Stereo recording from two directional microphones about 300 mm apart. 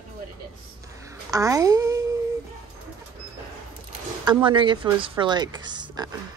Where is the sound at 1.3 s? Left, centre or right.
Centre.